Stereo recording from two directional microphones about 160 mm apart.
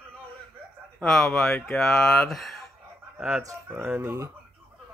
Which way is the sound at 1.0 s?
5° left (ahead or behind).